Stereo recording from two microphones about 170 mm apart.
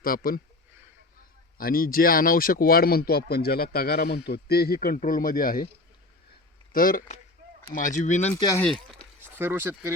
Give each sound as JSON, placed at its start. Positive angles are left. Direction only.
{"t": 0.0, "sound": "speech", "side_deg": 60}
{"t": 1.5, "sound": "speech", "side_deg": 60}
{"t": 6.7, "sound": "speech", "side_deg": 55}
{"t": 8.3, "sound": "speech", "side_deg": 20}
{"t": 9.2, "sound": "speech", "side_deg": -10}